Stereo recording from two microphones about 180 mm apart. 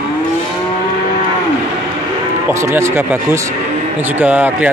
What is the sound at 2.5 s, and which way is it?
Speech, 15° right (ahead or behind).